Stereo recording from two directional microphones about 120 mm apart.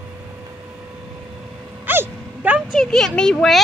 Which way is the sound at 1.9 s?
15° right (ahead or behind).